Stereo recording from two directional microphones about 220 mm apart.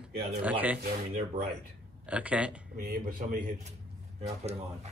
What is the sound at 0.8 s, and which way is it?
Speech, 40° right (ahead or behind).